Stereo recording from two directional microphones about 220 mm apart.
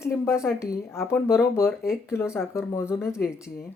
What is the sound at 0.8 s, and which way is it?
Speech, 10° left (ahead or behind).